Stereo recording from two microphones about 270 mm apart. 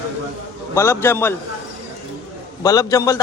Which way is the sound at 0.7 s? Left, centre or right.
Centre.